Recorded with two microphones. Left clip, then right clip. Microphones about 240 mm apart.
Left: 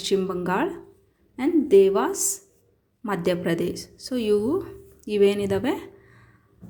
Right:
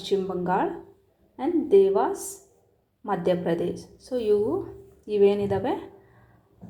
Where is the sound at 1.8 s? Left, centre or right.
Left.